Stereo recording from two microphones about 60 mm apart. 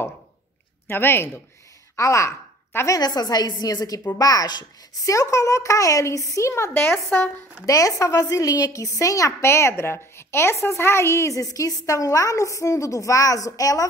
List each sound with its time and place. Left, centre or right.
0.8 s speech: left
2.0 s a woman's voice: left
2.9 s a woman's voice: left
5.0 s a woman's voice: left
7.1 s speech: left
7.6 s a woman's voice: left